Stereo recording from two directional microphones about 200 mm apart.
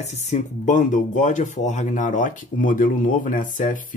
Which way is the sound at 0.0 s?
35° left (ahead or behind).